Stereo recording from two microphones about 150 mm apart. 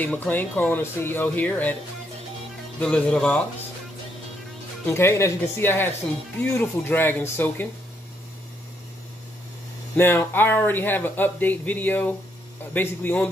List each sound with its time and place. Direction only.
0.0 s speech: 10° left (ahead or behind)
2.8 s speech: 5° left (ahead or behind)
4.8 s speech: 15° left (ahead or behind)
9.9 s speech: 15° left (ahead or behind)